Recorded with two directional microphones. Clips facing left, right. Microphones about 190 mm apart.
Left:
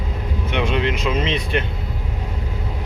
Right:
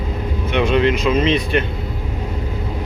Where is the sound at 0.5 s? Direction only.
20° left (ahead or behind).